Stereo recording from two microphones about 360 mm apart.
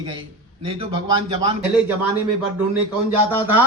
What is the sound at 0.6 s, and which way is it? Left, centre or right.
Speech, centre.